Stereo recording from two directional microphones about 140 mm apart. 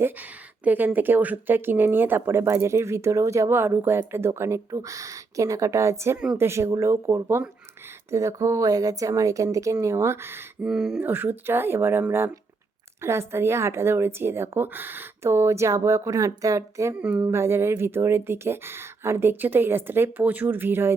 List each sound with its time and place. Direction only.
0.0 s speech: 10° right (ahead or behind)
10.7 s speech: centre (ahead or behind); by 17.0 s 20° right (ahead or behind)
17.0 s speech: 10° right (ahead or behind)